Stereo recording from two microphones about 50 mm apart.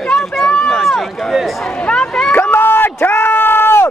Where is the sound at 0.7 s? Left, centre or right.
Centre.